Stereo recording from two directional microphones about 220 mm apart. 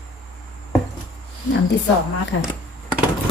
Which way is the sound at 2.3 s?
60° left (ahead or behind).